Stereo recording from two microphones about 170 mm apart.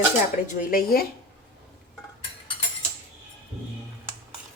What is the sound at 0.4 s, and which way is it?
Speech, 55° left (ahead or behind).